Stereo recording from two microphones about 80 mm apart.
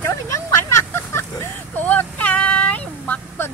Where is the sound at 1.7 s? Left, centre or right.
Left.